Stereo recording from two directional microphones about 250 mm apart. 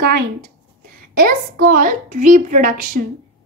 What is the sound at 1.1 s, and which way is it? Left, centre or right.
A woman's voice, right.